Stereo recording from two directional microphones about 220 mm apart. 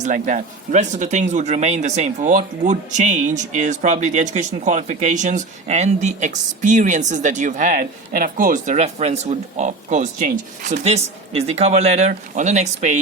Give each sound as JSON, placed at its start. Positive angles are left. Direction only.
{"t": 0.0, "sound": "speech", "side_deg": -35}